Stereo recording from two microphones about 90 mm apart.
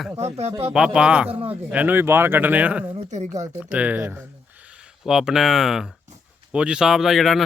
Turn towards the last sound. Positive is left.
turn(degrees=0)  # may be behind; listen again after turning